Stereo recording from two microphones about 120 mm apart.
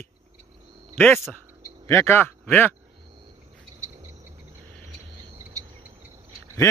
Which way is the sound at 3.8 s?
25° right (ahead or behind).